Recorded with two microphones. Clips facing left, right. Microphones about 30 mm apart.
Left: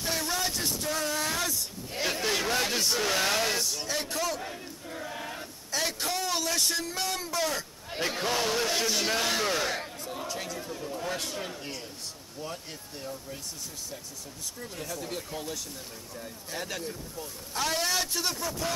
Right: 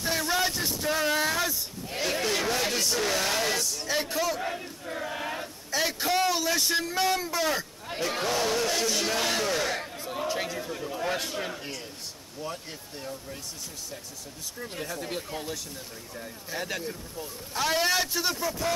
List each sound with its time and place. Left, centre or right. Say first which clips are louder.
0.0 s vehicle: right 2 dB; centre
0.3 s vehicle: right 3 dB; centre
1.3 s a sound: right 3 dB; centre
2.2 s a sound: left 1 dB; centre
3.0 s speech: left 1 dB; centre
3.9 s a man's voice: right 5 dB; centre
4.4 s speech: right 5 dB; right
5.7 s a man's voice: right 4 dB; centre
8.3 s speech: right 1 dB; centre
10.0 s speech: right 5 dB; right
11.1 s a man's voice: right 3 dB; centre
14.6 s a man's voice: right 3 dB; centre